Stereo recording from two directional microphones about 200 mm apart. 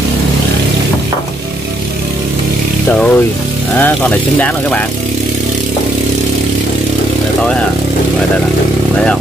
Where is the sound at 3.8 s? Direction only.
5° left (ahead or behind).